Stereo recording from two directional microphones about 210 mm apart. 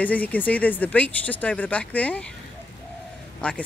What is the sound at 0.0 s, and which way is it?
Speech, 10° left (ahead or behind).